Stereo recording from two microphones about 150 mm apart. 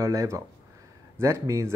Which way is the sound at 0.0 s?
20° right (ahead or behind).